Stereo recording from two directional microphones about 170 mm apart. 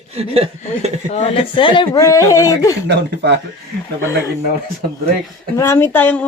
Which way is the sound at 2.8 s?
90° right.